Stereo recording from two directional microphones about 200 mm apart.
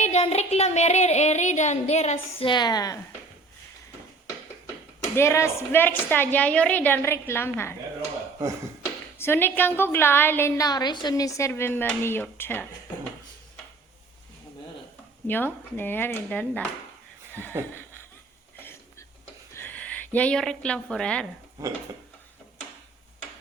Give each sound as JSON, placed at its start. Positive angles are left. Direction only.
{"t": 0.0, "sound": "speech", "side_deg": 30}
{"t": 2.5, "sound": "a woman's voice", "side_deg": 20}
{"t": 5.1, "sound": "a woman's voice", "side_deg": 15}
{"t": 9.1, "sound": "a woman's voice", "side_deg": 10}
{"t": 15.3, "sound": "a woman's voice", "side_deg": 10}
{"t": 19.5, "sound": "speech", "side_deg": 10}
{"t": 21.6, "sound": "speech", "side_deg": -15}